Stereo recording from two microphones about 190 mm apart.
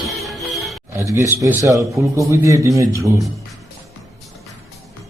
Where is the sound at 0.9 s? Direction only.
15° right (ahead or behind).